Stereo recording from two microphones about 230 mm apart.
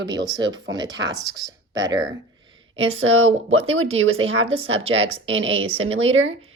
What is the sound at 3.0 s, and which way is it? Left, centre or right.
Speech, right.